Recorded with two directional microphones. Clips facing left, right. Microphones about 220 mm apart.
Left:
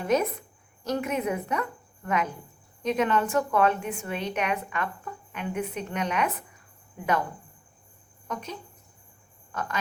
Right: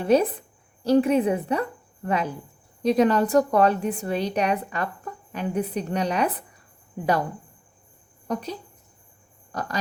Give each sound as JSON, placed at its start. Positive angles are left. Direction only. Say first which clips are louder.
{"t": 0.0, "sound": "a woman's voice", "louder": "right 5 dB", "side_deg": -30}
{"t": 8.3, "sound": "a woman's voice", "louder": "right 6 dB", "side_deg": -35}